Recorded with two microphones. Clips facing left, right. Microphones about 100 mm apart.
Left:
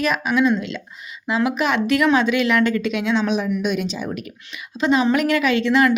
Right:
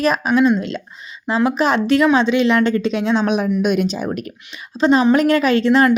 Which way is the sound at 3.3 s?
55° right (ahead or behind).